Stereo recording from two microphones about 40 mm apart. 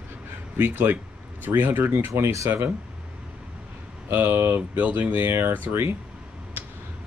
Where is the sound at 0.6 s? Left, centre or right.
Right.